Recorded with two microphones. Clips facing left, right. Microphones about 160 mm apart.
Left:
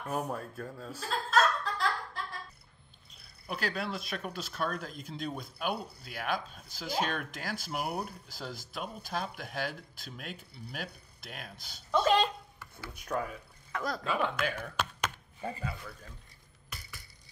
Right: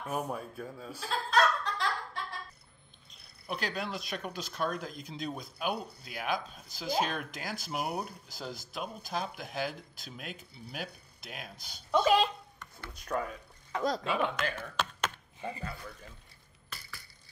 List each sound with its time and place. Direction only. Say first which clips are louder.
0.0 s speech: even; centre (ahead or behind)
0.9 s laughter: even; centre (ahead or behind)
3.4 s speech: left 1 dB; centre (ahead or behind)
13.7 s speech: right 4 dB; 20° right (ahead or behind)
14.0 s speech: even; centre (ahead or behind)